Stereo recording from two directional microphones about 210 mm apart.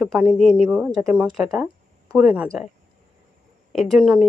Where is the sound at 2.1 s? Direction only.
5° right (ahead or behind).